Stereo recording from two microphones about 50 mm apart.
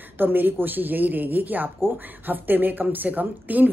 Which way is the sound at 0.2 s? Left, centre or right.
Right.